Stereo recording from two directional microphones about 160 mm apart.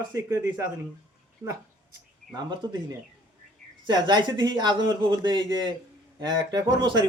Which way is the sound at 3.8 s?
30° right (ahead or behind).